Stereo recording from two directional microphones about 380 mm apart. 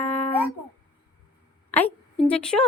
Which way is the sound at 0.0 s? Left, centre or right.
Centre.